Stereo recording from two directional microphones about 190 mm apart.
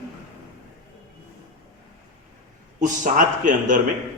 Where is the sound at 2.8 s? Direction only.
45° right (ahead or behind).